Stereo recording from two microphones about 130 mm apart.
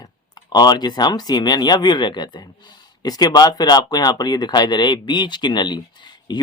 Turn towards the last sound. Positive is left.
turn(degrees=35)  # may be behind; listen again after turning